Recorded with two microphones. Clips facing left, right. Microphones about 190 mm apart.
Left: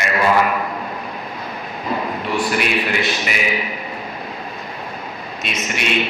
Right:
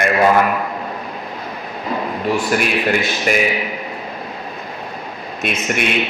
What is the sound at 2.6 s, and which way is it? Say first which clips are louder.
Speech: right 2 dB; 45° right (ahead or behind).